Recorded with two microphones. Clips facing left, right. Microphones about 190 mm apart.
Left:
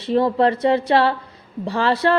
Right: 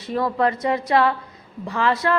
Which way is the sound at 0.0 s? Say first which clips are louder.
Left 4 dB; 30° left (ahead or behind).